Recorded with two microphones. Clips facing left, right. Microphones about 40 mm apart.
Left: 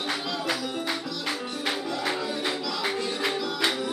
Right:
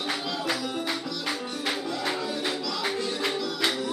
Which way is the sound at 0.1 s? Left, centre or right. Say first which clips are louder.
Even; centre.